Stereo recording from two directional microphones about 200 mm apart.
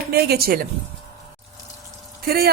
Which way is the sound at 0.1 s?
50° right (ahead or behind).